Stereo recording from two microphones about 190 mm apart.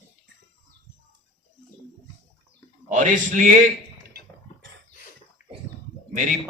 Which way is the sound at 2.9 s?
40° right (ahead or behind).